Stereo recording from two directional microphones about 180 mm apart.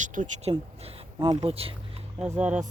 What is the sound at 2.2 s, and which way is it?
Speech, 5° right (ahead or behind).